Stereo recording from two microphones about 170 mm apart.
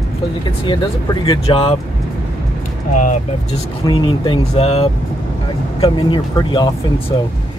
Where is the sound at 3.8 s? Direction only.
25° left (ahead or behind).